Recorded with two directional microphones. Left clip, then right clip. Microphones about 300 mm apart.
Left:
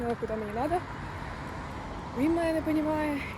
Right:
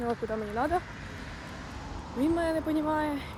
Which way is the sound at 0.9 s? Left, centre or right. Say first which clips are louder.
Left 4 dB; centre.